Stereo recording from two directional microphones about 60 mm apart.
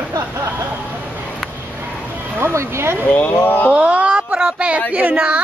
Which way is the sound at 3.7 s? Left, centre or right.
Right.